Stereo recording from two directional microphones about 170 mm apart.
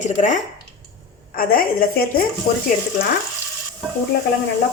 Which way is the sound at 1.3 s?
60° left (ahead or behind).